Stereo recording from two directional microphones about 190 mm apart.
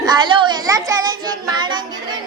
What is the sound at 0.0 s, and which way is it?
Child singing, 20° right (ahead or behind).